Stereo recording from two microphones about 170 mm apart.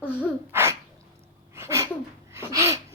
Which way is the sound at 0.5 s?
15° right (ahead or behind).